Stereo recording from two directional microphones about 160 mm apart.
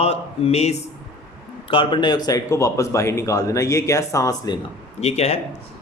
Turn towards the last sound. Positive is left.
turn(degrees=40)  # may be behind; listen again after turning